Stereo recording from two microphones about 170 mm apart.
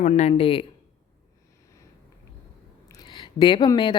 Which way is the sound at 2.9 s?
25° left (ahead or behind).